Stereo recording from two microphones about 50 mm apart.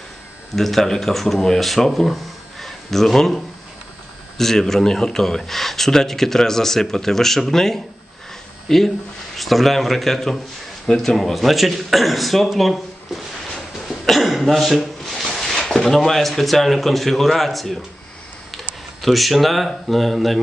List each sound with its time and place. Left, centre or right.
0.5 s speech: centre
19.0 s speech: centre